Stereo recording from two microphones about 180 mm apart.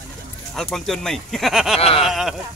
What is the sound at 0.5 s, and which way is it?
Speech, centre (ahead or behind).